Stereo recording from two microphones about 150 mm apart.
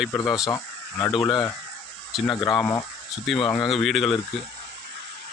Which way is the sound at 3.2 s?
Centre (ahead or behind).